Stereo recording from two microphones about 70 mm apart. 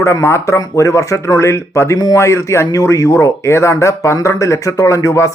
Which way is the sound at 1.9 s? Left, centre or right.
Left.